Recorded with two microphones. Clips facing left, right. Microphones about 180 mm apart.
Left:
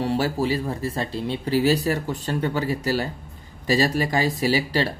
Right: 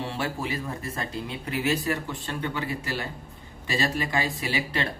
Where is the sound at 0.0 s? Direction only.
40° left (ahead or behind).